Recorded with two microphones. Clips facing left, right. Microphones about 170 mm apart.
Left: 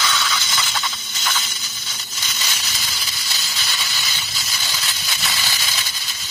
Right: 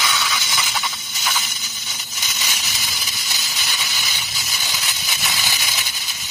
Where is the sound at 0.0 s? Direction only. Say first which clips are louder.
Even; 15° right (ahead or behind).